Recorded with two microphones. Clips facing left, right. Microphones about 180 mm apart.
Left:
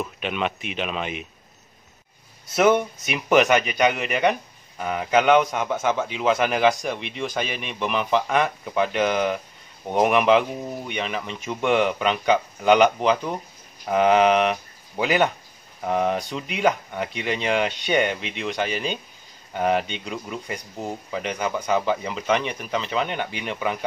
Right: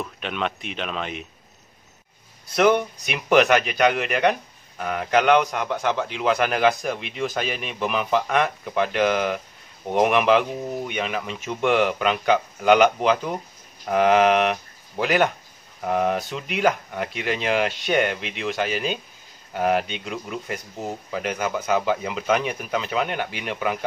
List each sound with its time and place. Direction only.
0.0 s speech: 5° left (ahead or behind)
2.5 s speech: 5° left (ahead or behind)